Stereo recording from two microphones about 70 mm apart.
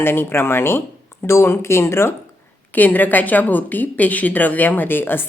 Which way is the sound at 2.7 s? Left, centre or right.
Left.